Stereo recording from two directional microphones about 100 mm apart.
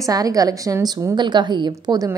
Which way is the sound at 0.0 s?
35° right (ahead or behind).